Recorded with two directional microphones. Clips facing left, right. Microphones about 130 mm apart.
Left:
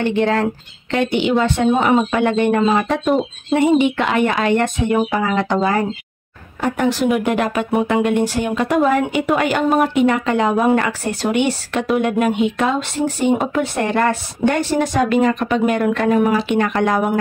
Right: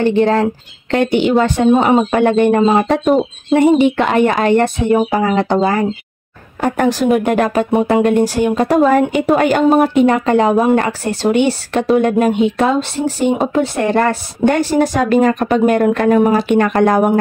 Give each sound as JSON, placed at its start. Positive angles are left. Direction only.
{"t": 0.0, "sound": "speech", "side_deg": -35}
{"t": 0.9, "sound": "speech", "side_deg": -45}
{"t": 6.6, "sound": "a woman's voice", "side_deg": -45}